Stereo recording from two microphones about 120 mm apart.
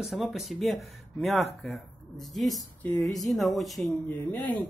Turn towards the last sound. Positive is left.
turn(degrees=10)  # may be behind; listen again after turning